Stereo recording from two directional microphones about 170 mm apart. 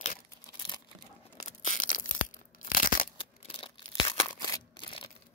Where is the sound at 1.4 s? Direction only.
45° left (ahead or behind).